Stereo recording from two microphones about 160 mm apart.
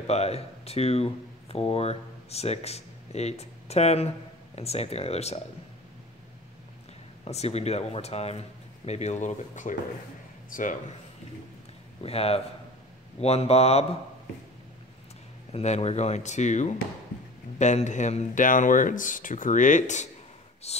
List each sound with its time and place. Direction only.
0.0 s speech: 40° left (ahead or behind)
7.2 s speech: 40° left (ahead or behind)
12.0 s speech: 40° left (ahead or behind)
15.5 s speech: 45° left (ahead or behind)